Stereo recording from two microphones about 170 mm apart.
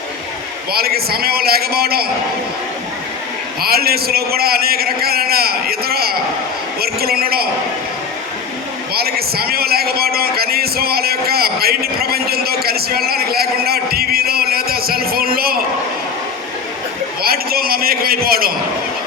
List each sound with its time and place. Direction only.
0.7 s a man's voice: 65° right (ahead or behind)
3.6 s a man's voice: 65° right (ahead or behind)
8.9 s a man's voice: 65° right (ahead or behind)
17.2 s a man's voice: 60° right (ahead or behind)